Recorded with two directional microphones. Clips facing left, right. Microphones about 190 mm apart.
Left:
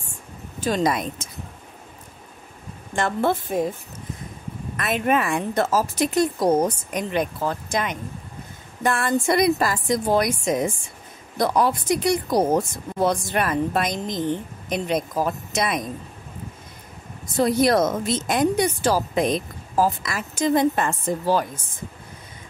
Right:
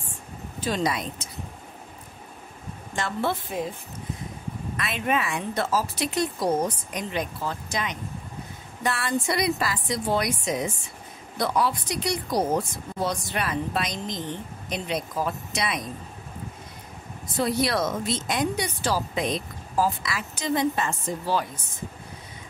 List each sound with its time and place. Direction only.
0.6 s speech: 45° left (ahead or behind)
3.0 s speech: 50° left (ahead or behind)
4.7 s speech: 50° left (ahead or behind)
17.4 s speech: 45° left (ahead or behind)